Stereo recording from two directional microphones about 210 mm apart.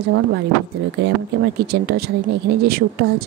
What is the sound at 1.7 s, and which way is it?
Speech, 50° right (ahead or behind).